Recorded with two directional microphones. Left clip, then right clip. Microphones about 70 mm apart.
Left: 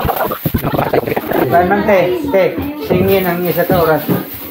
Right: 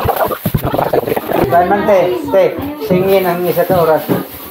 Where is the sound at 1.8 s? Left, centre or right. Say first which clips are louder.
Right 1 dB; centre.